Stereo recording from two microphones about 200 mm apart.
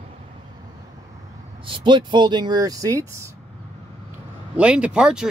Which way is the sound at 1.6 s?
25° right (ahead or behind).